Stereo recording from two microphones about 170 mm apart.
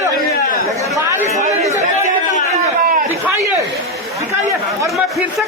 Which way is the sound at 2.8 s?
60° right (ahead or behind).